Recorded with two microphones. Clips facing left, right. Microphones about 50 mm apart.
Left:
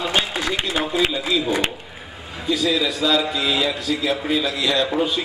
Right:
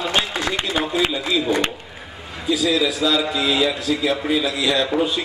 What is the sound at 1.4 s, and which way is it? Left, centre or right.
A man's voice, centre.